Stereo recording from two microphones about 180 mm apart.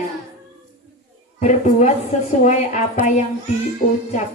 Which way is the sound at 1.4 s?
45° left (ahead or behind).